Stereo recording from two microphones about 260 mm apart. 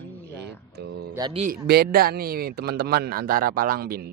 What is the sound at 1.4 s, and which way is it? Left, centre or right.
A man's voice, right.